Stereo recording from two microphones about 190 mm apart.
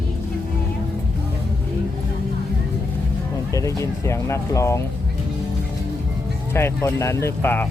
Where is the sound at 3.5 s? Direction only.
15° left (ahead or behind).